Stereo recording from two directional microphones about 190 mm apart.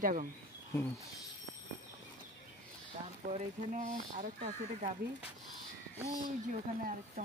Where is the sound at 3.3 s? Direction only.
40° right (ahead or behind).